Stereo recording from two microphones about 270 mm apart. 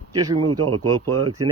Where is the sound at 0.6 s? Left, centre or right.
Right.